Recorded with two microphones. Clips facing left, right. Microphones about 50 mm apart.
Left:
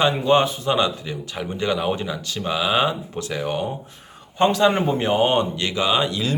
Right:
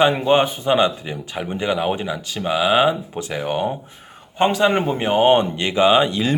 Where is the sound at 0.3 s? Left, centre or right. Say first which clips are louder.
Right 2 dB; right.